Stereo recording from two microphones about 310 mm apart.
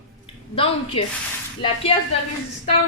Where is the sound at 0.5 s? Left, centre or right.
Centre.